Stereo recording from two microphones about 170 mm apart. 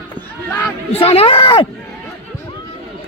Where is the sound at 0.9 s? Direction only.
35° left (ahead or behind).